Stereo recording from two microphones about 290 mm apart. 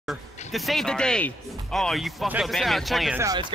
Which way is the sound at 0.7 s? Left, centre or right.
Centre.